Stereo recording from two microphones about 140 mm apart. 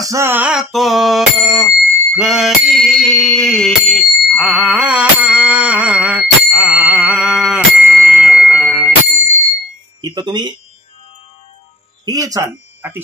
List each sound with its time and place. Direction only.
0.0 s bicycle bell: 20° right (ahead or behind)
10.0 s music: 30° right (ahead or behind)
12.0 s a sound: 25° right (ahead or behind)